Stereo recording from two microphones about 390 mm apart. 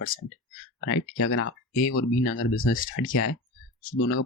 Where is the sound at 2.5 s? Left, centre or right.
Left.